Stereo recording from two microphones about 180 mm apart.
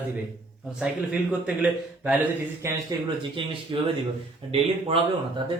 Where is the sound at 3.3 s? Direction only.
30° right (ahead or behind).